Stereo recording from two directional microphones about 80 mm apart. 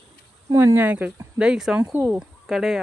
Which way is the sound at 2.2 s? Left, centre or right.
Centre.